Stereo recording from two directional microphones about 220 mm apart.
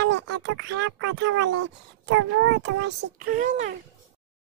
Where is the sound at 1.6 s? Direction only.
55° right (ahead or behind).